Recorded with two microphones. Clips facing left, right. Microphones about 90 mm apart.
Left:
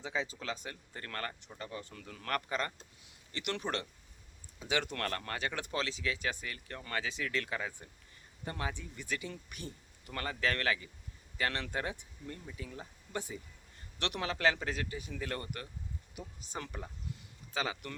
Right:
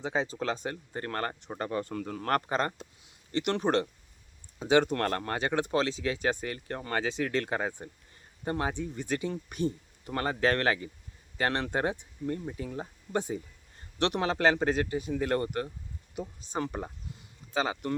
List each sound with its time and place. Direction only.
0.0 s speech: 40° right (ahead or behind)
1.5 s speech: 55° right (ahead or behind); by 17.9 s 30° right (ahead or behind)